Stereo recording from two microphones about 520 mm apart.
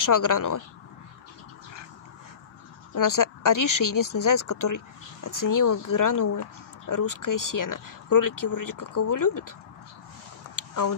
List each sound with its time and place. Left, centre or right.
0.0 s speech: left
2.9 s speech: left
10.7 s speech: left